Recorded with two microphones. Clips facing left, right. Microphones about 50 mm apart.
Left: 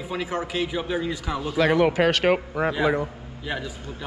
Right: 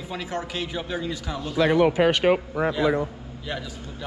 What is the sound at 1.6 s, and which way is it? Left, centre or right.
Speech, left.